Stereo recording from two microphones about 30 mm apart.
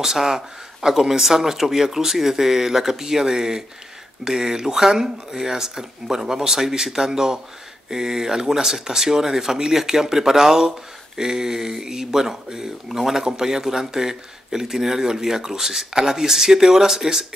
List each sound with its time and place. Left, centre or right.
0.0 s speech: centre